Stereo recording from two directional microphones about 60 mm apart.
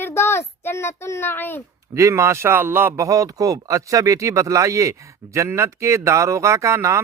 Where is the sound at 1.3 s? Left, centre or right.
Left.